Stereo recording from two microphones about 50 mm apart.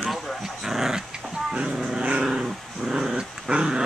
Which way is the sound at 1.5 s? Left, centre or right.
Centre.